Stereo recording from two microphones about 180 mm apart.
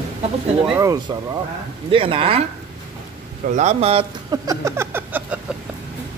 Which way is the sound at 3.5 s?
35° right (ahead or behind).